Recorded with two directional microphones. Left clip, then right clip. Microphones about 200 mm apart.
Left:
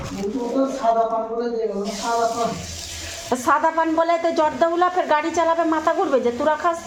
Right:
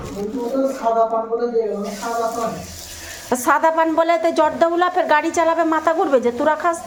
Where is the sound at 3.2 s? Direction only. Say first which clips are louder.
Right 3 dB; 15° right (ahead or behind).